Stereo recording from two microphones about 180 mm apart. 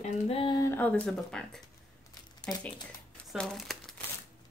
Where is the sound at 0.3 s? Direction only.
25° left (ahead or behind).